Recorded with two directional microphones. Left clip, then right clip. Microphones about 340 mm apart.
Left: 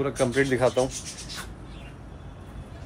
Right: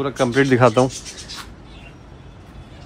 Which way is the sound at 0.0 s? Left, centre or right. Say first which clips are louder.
Right 6 dB; centre.